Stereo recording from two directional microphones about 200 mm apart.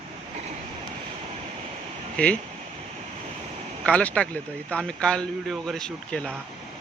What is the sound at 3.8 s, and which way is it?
Speech, 5° left (ahead or behind).